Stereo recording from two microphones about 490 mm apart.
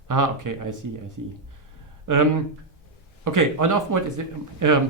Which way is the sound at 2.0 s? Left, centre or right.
Right.